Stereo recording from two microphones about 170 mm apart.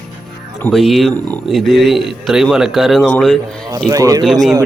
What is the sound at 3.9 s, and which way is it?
Speech, 20° right (ahead or behind).